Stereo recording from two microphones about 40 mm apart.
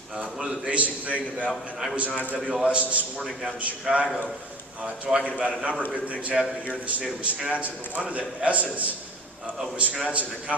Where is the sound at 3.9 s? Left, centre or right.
Centre.